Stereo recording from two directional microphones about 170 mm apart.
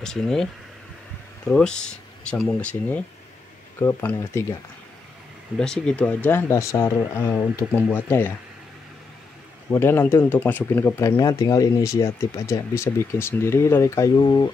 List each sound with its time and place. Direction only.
0.0 s speech: 5° left (ahead or behind)
1.5 s speech: 5° left (ahead or behind)
5.6 s speech: 5° left (ahead or behind)
9.7 s speech: 15° left (ahead or behind)